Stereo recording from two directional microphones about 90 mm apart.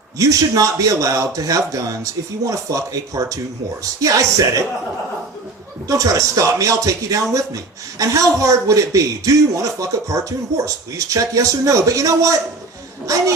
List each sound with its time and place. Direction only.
0.2 s speech: 40° right (ahead or behind)
5.9 s speech: 40° right (ahead or behind)